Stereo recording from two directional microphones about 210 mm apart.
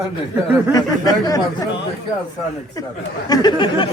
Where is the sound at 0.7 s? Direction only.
15° left (ahead or behind).